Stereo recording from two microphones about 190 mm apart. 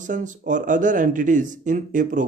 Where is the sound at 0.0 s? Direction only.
40° right (ahead or behind).